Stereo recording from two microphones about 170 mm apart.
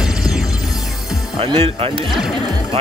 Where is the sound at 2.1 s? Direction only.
Centre (ahead or behind).